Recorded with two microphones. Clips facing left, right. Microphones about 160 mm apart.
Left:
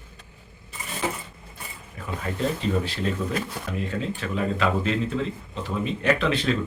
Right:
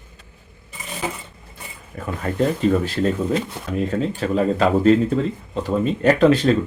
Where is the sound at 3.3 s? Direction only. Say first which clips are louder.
Right 7 dB; 25° right (ahead or behind).